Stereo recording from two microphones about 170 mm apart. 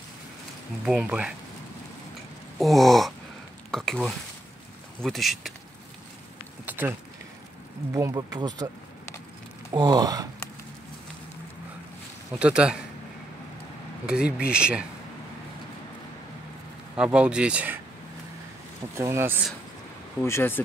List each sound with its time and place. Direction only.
0.8 s speech: 5° right (ahead or behind)
2.6 s speech: centre (ahead or behind)
6.6 s a sound: 10° right (ahead or behind)
7.9 s speech: 20° right (ahead or behind)
9.7 s speech: 25° right (ahead or behind)
12.3 s speech: 5° right (ahead or behind)
14.0 s speech: 5° right (ahead or behind)
16.9 s speech: 5° right (ahead or behind)
18.9 s speech: 15° right (ahead or behind)
20.2 s speech: 15° left (ahead or behind)